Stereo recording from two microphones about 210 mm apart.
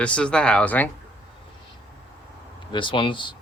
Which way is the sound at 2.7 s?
25° left (ahead or behind).